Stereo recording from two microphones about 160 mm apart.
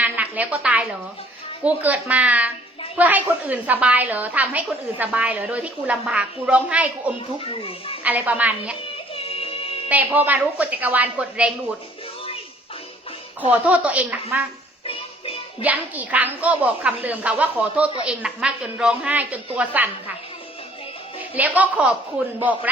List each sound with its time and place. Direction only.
0.0 s a sound: 10° right (ahead or behind)
1.6 s a woman's voice: 10° right (ahead or behind)
7.3 s a child's voice: 35° left (ahead or behind)
8.0 s a woman's voice: 10° right (ahead or behind)
9.1 s music: 35° left (ahead or behind)
9.9 s a woman's voice: 10° right (ahead or behind)
13.5 s a woman's voice: 10° right (ahead or behind)
14.8 s music: 35° left (ahead or behind)
15.6 s a woman's voice: 10° right (ahead or behind)
21.3 s a woman's voice: 10° right (ahead or behind)